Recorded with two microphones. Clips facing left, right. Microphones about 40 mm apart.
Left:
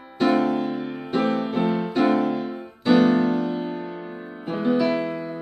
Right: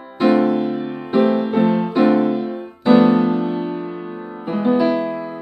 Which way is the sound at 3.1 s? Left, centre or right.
Right.